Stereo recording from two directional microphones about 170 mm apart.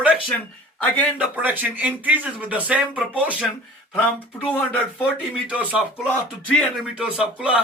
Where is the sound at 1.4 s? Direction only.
10° right (ahead or behind).